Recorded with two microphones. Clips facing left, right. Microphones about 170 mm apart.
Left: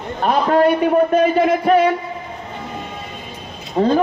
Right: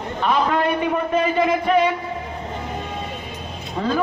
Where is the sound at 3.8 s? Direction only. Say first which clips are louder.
Left 7 dB; 35° left (ahead or behind).